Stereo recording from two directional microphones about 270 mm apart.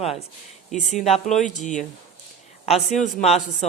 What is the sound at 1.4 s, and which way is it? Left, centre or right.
Speech, left.